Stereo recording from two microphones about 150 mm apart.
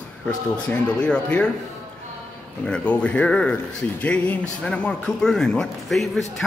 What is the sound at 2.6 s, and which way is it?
Speech, 10° left (ahead or behind).